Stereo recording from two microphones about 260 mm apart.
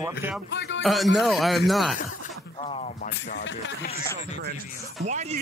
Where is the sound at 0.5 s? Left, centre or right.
Left.